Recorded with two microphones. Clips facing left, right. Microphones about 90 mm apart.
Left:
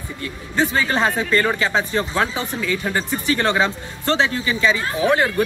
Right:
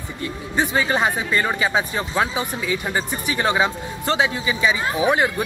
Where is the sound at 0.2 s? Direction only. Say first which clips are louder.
Left 1 dB; 15° right (ahead or behind).